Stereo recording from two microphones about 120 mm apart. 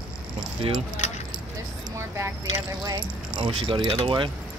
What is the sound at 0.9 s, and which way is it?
Keys jangling, 75° left (ahead or behind).